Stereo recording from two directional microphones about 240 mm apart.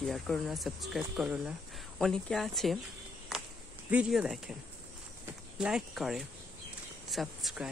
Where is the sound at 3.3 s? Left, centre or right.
Centre.